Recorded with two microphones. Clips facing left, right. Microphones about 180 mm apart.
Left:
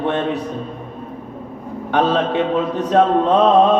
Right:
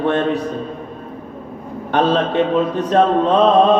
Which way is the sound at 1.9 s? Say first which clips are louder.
Right 1 dB; 15° left (ahead or behind).